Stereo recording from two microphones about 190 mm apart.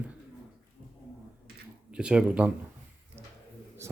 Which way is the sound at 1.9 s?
5° right (ahead or behind).